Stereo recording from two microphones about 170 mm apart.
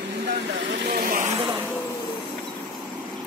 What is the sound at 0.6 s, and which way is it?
Vehicle, 65° right (ahead or behind).